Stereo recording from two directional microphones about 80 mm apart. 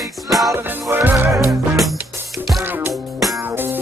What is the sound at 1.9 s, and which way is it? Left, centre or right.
Music, right.